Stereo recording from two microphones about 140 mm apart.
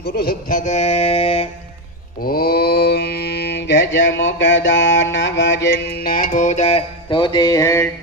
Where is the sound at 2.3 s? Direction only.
90° left.